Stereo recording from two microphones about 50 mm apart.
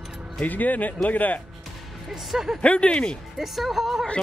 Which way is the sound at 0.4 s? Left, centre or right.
Left.